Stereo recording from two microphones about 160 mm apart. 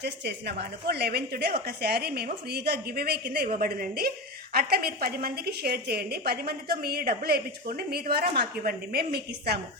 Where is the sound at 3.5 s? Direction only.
65° right (ahead or behind); by 9.6 s 80° right.